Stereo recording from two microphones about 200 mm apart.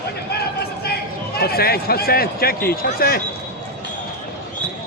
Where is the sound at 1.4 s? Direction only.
50° left (ahead or behind).